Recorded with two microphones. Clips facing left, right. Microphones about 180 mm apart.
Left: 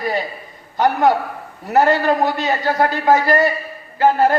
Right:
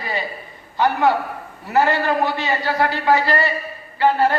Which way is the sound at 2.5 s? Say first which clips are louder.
Left 3 dB; 45° left (ahead or behind).